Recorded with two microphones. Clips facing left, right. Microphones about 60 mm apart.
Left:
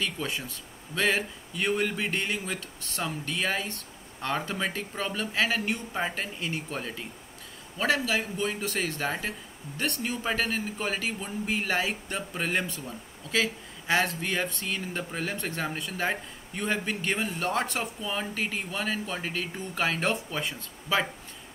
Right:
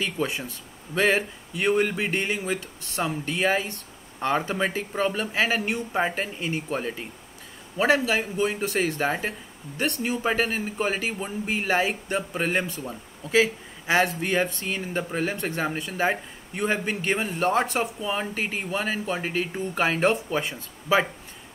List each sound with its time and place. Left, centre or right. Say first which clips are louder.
0.0 s speech: right 4 dB; centre
2.1 s speech: right 4 dB; centre
6.2 s speech: right 4 dB; centre
13.3 s speech: right 7 dB; centre
18.6 s speech: right 4 dB; centre